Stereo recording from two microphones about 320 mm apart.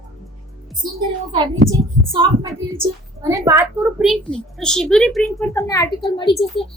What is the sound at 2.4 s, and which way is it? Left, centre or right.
A child's voice, centre.